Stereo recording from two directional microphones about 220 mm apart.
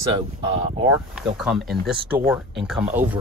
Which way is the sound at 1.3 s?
Centre (ahead or behind).